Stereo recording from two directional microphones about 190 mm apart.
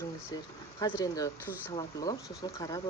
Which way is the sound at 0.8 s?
20° left (ahead or behind).